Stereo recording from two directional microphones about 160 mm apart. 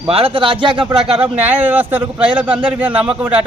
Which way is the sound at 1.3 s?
10° right (ahead or behind).